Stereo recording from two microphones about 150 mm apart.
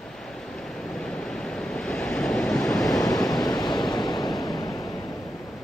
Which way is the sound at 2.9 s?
25° left (ahead or behind).